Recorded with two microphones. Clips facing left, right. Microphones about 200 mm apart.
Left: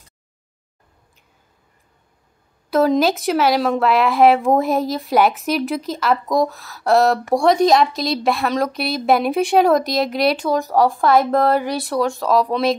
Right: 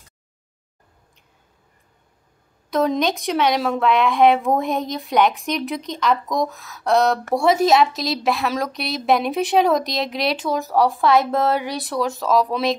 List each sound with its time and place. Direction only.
2.7 s a woman's voice: centre (ahead or behind)